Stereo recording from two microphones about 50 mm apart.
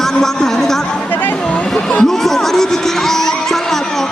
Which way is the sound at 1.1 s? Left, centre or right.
Left.